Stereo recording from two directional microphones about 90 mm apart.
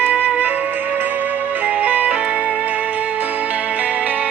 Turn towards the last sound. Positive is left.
turn(degrees=-15)  # may be behind; listen again after turning